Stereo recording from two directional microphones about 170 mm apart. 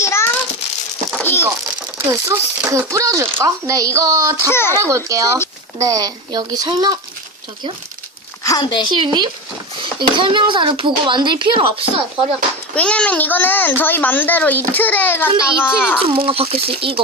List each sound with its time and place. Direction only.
0.0 s a sound: 15° left (ahead or behind)
2.0 s a child's voice: 15° right (ahead or behind)
4.4 s a child's voice: 15° left (ahead or behind)
4.8 s a child's voice: 15° right (ahead or behind)
8.4 s speech: 25° left (ahead or behind)
8.9 s a child's voice: 30° right (ahead or behind)
12.7 s a child's voice: 5° left (ahead or behind)
16.0 s speech: 30° right (ahead or behind)